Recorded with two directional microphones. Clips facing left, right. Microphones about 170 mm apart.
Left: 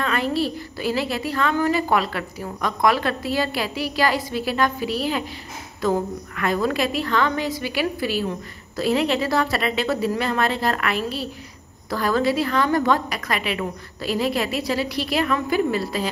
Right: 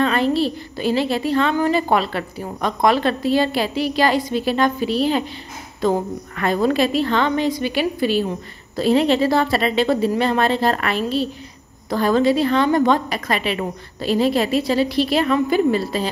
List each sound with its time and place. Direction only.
0.0 s a woman's voice: 30° right (ahead or behind)